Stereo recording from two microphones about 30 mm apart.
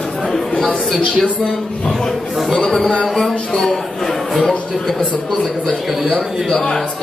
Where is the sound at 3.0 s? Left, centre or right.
Centre.